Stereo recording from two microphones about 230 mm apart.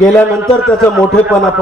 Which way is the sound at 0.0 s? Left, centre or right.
Centre.